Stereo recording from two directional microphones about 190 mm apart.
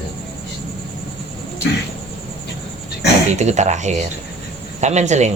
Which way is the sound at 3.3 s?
40° right (ahead or behind).